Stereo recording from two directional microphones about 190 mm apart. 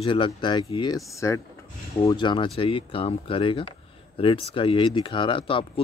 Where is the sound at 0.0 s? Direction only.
25° left (ahead or behind).